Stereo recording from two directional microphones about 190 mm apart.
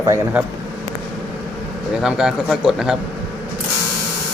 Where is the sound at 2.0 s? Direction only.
5° right (ahead or behind).